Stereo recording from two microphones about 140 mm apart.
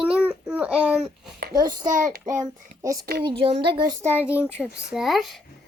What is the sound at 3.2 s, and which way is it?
Speech, 40° right (ahead or behind).